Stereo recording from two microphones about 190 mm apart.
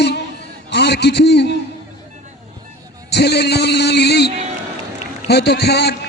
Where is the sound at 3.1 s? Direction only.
60° left (ahead or behind).